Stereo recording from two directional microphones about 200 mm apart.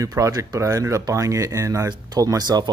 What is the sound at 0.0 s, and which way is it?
Speech, 15° right (ahead or behind).